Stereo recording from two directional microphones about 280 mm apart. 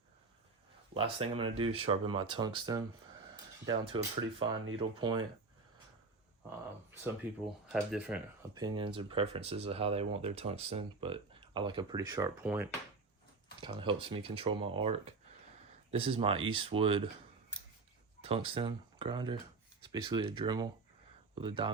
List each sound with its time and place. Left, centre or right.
0.9 s speech: centre
7.0 s speech: centre
18.2 s speech: right